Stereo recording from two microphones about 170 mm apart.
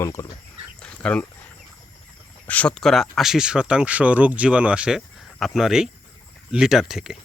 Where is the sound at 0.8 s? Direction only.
5° left (ahead or behind).